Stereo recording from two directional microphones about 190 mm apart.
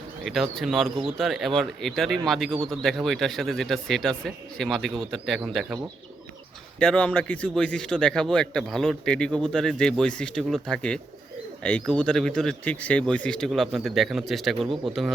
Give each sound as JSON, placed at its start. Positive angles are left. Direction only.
{"t": 0.3, "sound": "a man's voice", "side_deg": 0}
{"t": 6.7, "sound": "a man's voice", "side_deg": 5}